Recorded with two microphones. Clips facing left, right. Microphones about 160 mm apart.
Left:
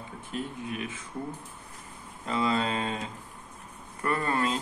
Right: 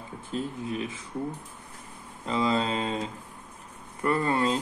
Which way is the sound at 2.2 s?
25° right (ahead or behind).